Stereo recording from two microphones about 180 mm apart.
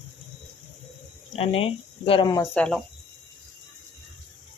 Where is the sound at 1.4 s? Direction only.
35° left (ahead or behind).